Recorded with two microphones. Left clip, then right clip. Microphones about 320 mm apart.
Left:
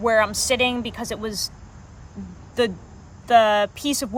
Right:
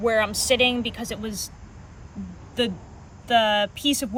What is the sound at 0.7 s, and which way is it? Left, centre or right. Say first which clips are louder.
Speech: even; left.